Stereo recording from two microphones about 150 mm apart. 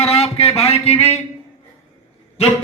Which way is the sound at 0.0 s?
45° left (ahead or behind).